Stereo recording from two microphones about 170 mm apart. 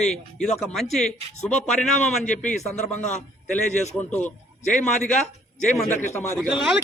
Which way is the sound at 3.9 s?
10° left (ahead or behind).